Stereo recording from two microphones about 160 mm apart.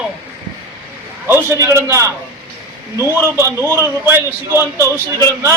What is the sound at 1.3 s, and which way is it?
A man's voice, 15° right (ahead or behind).